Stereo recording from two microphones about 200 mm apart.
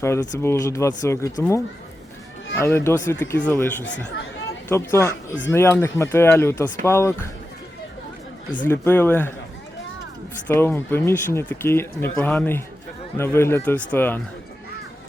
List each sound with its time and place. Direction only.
0.0 s speech: 15° left (ahead or behind)
8.6 s speech: 10° left (ahead or behind)
10.4 s speech: 10° left (ahead or behind)